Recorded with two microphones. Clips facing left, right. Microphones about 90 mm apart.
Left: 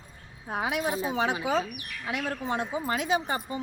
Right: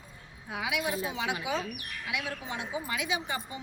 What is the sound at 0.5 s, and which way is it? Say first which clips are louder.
A woman's voice: left 4 dB; 40° left (ahead or behind).